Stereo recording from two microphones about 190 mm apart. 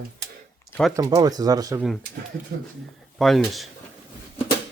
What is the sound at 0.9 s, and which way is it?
Speech, 20° right (ahead or behind).